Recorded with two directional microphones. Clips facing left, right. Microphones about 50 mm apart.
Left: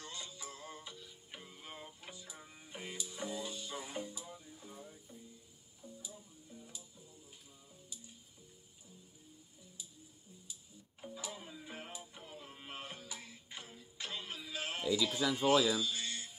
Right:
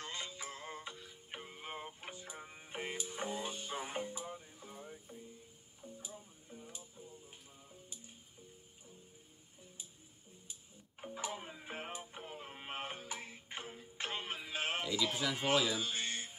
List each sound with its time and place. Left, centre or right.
0.0 s music: right
10.5 s music: right